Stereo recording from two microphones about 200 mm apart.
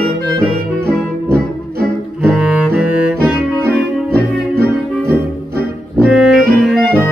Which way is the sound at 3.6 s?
50° right (ahead or behind).